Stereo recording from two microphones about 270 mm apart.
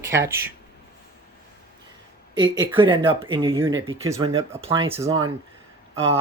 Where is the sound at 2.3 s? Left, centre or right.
Centre.